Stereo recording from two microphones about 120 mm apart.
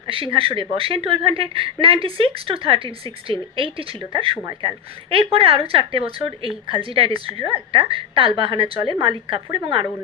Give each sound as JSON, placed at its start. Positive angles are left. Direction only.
{"t": 0.1, "sound": "a woman's voice", "side_deg": -50}